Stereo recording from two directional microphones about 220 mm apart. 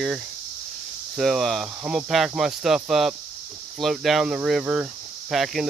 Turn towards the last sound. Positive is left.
turn(degrees=0)  # may be behind; listen again after turning